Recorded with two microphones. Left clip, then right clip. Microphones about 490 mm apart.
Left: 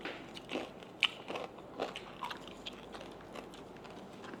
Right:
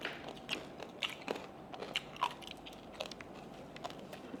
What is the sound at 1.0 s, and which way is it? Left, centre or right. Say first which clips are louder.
Biting: left 8 dB; left.